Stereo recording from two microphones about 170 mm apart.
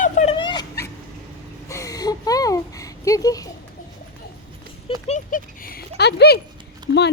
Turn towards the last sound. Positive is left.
turn(degrees=-25)  # may be behind; listen again after turning